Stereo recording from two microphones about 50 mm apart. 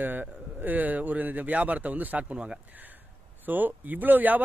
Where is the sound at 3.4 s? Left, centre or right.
Right.